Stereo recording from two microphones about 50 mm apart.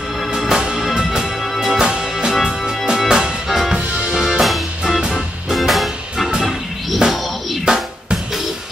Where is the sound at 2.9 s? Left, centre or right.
Centre.